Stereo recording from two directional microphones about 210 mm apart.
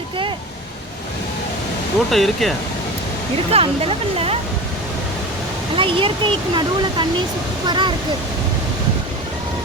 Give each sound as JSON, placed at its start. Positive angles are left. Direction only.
{"t": 2.0, "sound": "speech", "side_deg": 0}
{"t": 3.5, "sound": "speech", "side_deg": -25}
{"t": 5.7, "sound": "speech", "side_deg": -25}